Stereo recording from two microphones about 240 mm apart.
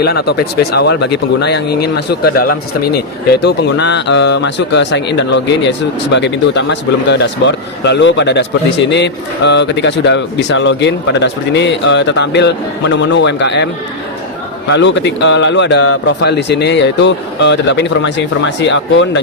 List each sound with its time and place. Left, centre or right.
0.0 s speech: left
14.7 s speech: left